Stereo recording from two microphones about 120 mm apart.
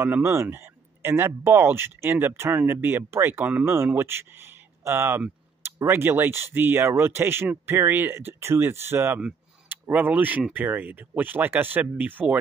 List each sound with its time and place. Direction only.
0.0 s speech: 20° right (ahead or behind)